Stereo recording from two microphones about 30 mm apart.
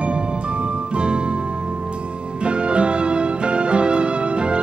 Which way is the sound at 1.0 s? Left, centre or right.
Right.